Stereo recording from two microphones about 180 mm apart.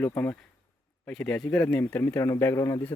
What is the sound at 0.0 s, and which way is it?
Speech, 10° left (ahead or behind).